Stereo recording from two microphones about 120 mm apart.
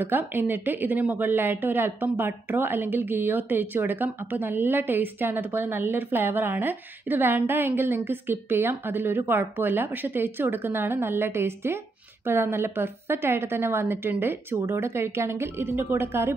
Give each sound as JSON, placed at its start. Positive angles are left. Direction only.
{"t": 0.0, "sound": "a woman's voice", "side_deg": -15}